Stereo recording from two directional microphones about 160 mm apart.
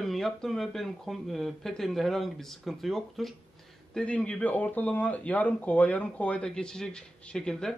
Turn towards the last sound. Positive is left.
turn(degrees=5)  # may be behind; listen again after turning